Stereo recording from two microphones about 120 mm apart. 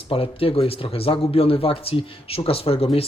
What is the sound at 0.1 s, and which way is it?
Speech, 50° left (ahead or behind).